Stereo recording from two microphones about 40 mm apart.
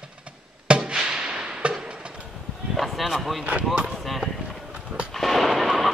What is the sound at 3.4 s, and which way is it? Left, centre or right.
Speech, right.